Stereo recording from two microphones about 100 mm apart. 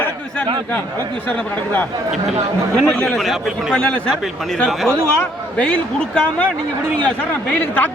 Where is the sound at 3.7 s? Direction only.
10° left (ahead or behind).